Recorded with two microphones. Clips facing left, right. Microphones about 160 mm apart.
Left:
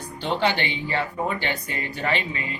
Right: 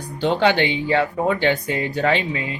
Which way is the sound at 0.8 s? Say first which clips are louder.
Right 5 dB; 90° right.